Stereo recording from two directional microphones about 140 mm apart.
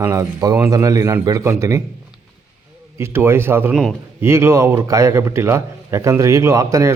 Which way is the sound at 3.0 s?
15° right (ahead or behind).